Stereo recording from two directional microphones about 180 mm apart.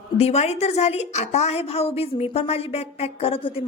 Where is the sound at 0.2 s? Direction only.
35° left (ahead or behind).